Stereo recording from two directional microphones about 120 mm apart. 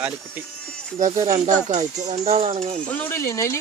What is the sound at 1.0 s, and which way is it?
Speech, 65° right (ahead or behind).